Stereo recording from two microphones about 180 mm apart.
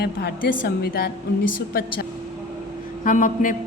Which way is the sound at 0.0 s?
60° left (ahead or behind).